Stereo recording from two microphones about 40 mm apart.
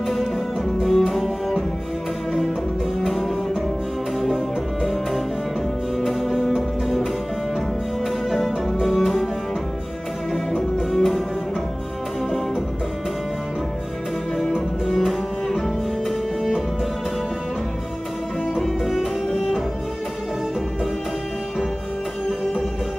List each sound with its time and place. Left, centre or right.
0.0 s music: centre
3.0 s music: centre
5.9 s music: centre
8.3 s music: centre
10.9 s music: centre
14.9 s music: centre
18.6 s music: centre